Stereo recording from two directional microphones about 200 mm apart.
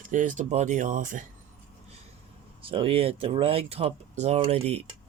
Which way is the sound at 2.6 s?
25° right (ahead or behind).